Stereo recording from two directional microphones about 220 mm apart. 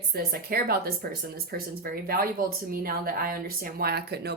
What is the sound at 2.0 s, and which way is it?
Speech, 45° right (ahead or behind).